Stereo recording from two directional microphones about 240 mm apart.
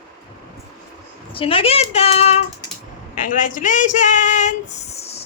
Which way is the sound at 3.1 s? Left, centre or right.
Left.